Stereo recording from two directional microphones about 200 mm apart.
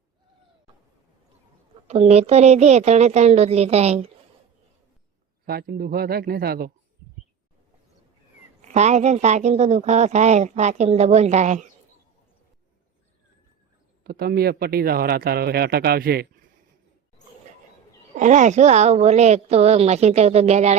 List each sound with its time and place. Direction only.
1.9 s a woman's voice: 30° right (ahead or behind)
5.5 s speech: 50° right (ahead or behind)
8.6 s a woman's voice: 35° right (ahead or behind)
14.0 s speech: 50° right (ahead or behind)
18.1 s a woman's voice: 35° right (ahead or behind)